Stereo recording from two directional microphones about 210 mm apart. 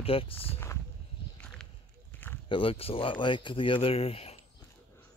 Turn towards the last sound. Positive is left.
turn(degrees=30)  # may be behind; listen again after turning